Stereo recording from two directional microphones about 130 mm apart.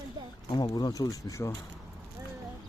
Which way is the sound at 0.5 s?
35° left (ahead or behind).